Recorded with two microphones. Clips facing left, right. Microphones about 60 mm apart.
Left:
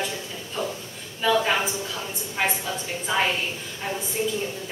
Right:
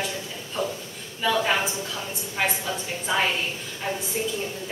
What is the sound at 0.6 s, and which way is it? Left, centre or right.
Speech, centre.